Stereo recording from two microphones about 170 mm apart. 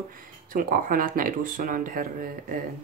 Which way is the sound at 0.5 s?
55° right (ahead or behind).